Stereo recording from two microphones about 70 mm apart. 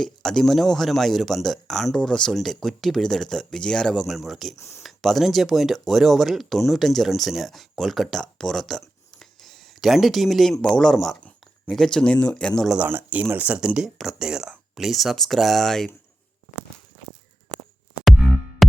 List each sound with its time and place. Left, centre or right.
0.0 s speech: centre
4.0 s speech: centre
4.5 s speech: left
4.8 s speech: centre
9.1 s a sound: centre
10.6 s speech: centre
11.2 s a sound: left
11.7 s speech: centre
12.8 s speech: right
13.6 s speech: centre
18.1 s music: centre